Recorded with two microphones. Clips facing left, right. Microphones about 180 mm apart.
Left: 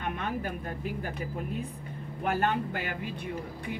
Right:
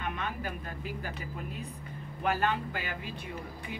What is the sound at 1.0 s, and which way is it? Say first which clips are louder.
Speech: left 4 dB; 50° left (ahead or behind).